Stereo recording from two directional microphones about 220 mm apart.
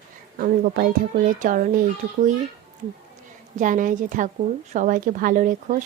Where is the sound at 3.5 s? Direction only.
35° right (ahead or behind).